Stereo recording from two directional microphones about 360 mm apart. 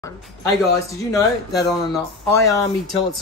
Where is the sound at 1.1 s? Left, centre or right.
Centre.